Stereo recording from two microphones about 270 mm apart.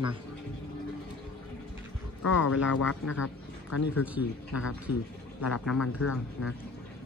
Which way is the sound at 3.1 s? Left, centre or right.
Left.